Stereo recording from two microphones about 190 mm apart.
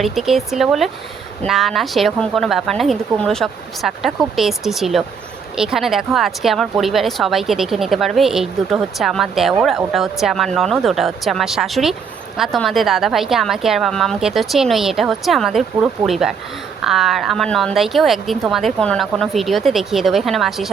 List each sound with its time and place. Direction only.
0.0 s speech: centre (ahead or behind)